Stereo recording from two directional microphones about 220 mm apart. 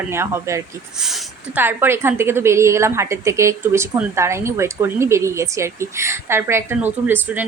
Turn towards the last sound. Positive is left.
turn(degrees=-10)  # may be behind; listen again after turning